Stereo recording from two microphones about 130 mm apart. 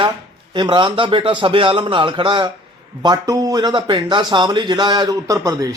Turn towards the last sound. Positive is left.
turn(degrees=-25)  # may be behind; listen again after turning